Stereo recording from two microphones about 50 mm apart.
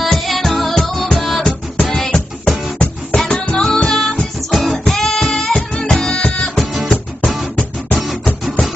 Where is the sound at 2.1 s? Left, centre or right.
Left.